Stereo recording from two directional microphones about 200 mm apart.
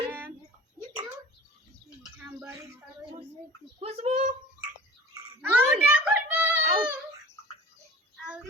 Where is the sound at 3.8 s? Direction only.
30° right (ahead or behind).